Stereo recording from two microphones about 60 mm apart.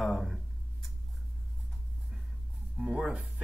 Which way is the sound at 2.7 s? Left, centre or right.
Centre.